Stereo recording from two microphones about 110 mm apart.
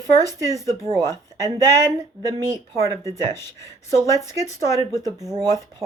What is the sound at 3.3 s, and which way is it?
Speech, 25° left (ahead or behind).